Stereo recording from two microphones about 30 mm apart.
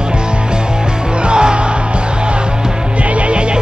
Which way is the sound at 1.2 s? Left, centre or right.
Right.